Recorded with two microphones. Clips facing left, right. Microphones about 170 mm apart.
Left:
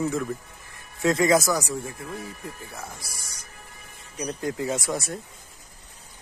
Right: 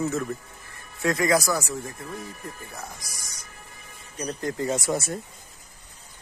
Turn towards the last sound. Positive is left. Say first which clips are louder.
# right 2 dB
turn(degrees=0)  # may be behind; listen again after turning